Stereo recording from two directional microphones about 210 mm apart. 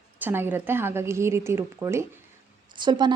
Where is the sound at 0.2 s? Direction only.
10° right (ahead or behind).